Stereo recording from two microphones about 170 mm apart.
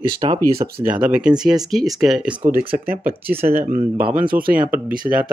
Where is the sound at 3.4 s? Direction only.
45° right (ahead or behind).